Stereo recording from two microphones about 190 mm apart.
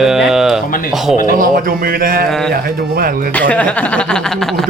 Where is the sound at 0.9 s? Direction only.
Centre (ahead or behind).